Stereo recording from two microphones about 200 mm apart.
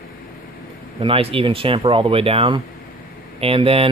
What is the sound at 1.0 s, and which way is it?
Speech, 25° right (ahead or behind).